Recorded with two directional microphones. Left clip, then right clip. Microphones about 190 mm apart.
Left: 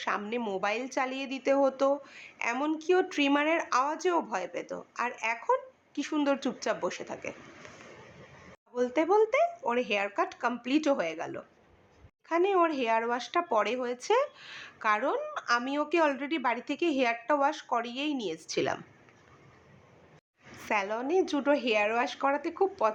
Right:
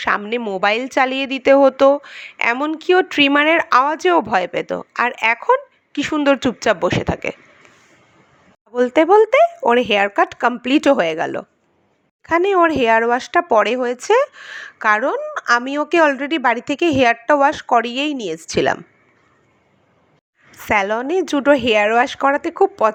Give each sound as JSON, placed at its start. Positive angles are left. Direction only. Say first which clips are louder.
{"t": 0.2, "sound": "speech", "louder": "right 12 dB", "side_deg": -35}
{"t": 8.7, "sound": "speech", "louder": "right 14 dB", "side_deg": -45}
{"t": 20.5, "sound": "speech", "louder": "right 13 dB", "side_deg": -45}